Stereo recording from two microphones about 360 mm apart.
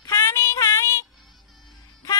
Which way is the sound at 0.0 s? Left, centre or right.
Centre.